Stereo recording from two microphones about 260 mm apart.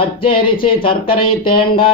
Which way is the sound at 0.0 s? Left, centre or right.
Left.